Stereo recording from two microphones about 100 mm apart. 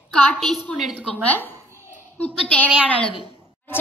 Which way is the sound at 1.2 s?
15° left (ahead or behind).